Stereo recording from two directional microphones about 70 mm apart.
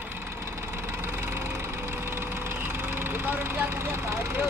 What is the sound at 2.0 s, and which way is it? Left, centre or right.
Vehicle, right.